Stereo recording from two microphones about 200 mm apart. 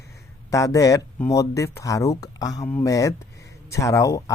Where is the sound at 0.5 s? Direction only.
15° left (ahead or behind).